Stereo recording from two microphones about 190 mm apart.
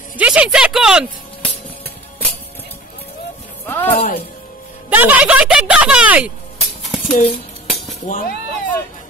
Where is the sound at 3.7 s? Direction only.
10° left (ahead or behind).